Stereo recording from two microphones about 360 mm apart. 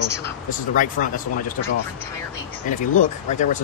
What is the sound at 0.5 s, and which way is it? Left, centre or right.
Speech, left.